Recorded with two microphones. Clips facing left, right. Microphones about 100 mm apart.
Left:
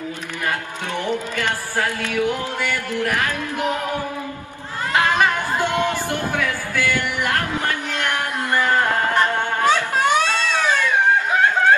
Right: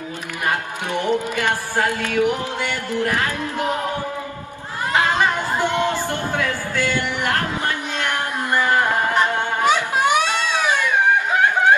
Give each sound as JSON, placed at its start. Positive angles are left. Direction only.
{"t": 0.5, "sound": "music", "side_deg": -15}
{"t": 4.9, "sound": "chatter", "side_deg": -15}
{"t": 5.8, "sound": "music", "side_deg": -20}
{"t": 11.3, "sound": "a sound", "side_deg": -15}